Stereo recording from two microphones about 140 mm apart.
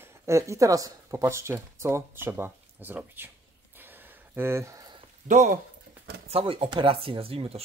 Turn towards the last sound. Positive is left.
turn(degrees=-45)  # may be behind; listen again after turning